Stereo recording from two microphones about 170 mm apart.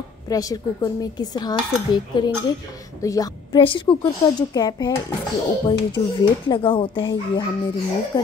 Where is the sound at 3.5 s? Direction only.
30° left (ahead or behind).